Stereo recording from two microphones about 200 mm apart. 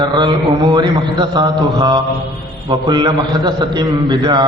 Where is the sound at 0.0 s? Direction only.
20° right (ahead or behind).